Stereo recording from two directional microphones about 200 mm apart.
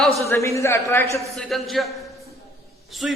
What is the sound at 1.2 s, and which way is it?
Speech, centre (ahead or behind).